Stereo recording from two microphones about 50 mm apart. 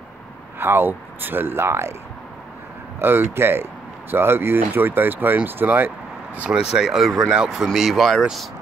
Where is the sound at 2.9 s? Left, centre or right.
Right.